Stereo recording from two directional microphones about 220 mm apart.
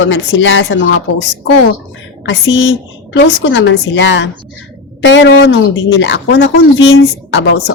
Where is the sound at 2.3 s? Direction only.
55° left (ahead or behind).